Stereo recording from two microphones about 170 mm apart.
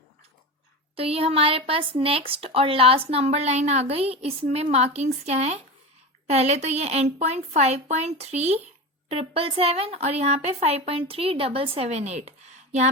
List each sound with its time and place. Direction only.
0.9 s speech: 35° right (ahead or behind)